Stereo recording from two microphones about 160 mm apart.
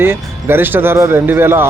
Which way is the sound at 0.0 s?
15° right (ahead or behind).